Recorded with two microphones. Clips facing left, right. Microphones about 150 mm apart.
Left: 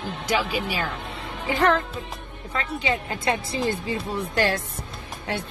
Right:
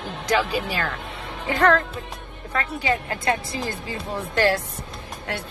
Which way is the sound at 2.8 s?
20° left (ahead or behind).